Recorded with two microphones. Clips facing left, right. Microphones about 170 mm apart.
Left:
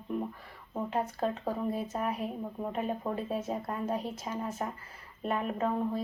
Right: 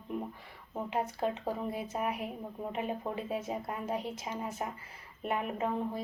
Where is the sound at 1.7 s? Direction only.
15° right (ahead or behind).